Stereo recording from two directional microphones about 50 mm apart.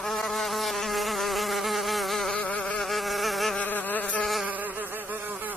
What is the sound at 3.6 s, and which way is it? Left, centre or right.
Insect, left.